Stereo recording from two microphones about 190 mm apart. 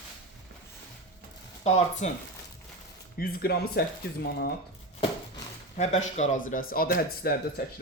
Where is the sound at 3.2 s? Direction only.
50° left (ahead or behind).